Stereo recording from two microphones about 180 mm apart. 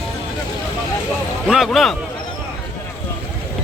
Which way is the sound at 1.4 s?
Centre (ahead or behind).